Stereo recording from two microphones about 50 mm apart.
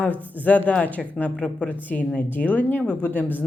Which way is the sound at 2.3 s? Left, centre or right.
Left.